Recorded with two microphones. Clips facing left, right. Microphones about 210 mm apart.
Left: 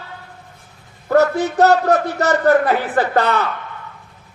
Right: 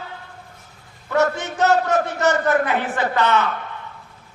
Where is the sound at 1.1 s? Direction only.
35° left (ahead or behind).